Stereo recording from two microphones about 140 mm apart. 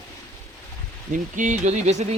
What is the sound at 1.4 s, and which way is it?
Speech, 60° right (ahead or behind).